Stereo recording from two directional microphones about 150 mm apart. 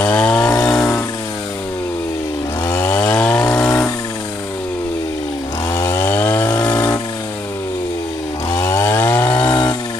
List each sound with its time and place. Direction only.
0.2 s chainsaw: 5° left (ahead or behind)
0.7 s a sound: 5° left (ahead or behind)
2.6 s chainsaw: 15° left (ahead or behind)
3.7 s a sound: 20° left (ahead or behind)
5.7 s chainsaw: 20° left (ahead or behind)
6.5 s chainsaw: 25° left (ahead or behind)
8.5 s chainsaw: 20° left (ahead or behind)